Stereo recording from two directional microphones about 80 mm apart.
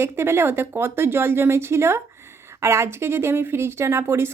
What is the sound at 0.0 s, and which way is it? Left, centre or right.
A woman's voice, right.